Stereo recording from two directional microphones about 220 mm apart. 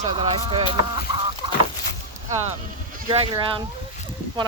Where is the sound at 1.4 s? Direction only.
20° right (ahead or behind).